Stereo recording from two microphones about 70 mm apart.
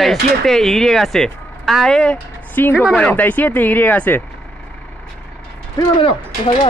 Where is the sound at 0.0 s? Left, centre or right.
Centre.